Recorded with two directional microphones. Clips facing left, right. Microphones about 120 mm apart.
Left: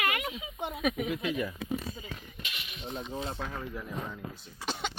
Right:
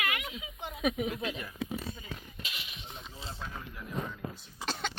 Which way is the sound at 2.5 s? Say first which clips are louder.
Left 1 dB; 25° right (ahead or behind).